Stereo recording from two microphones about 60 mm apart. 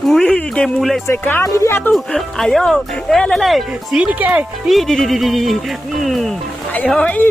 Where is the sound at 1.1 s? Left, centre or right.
Left.